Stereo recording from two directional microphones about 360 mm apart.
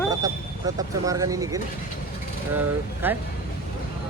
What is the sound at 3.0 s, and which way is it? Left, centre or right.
Speech, centre.